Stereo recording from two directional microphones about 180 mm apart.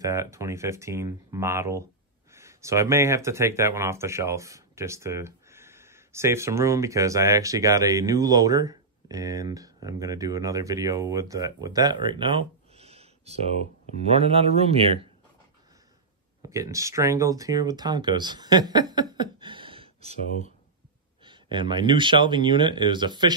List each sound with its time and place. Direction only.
0.0 s speech: 15° right (ahead or behind); by 15.0 s 30° right (ahead or behind)
16.4 s speech: 15° right (ahead or behind)
21.2 s speech: 25° right (ahead or behind)